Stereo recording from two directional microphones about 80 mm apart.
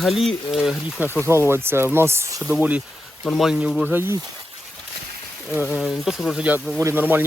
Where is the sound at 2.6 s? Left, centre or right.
Centre.